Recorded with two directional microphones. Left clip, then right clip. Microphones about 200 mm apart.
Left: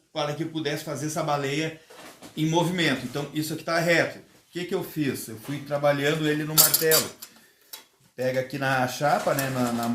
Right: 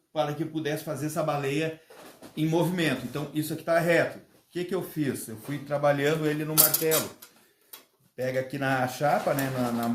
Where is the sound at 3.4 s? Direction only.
20° right (ahead or behind).